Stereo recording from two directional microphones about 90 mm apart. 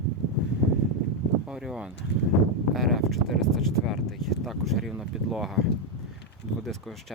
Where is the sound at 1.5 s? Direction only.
5° right (ahead or behind).